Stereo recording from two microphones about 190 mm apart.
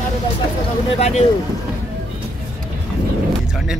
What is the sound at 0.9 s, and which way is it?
Speech, 35° left (ahead or behind).